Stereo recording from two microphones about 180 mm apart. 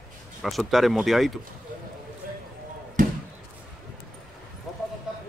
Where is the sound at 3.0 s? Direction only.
50° right (ahead or behind).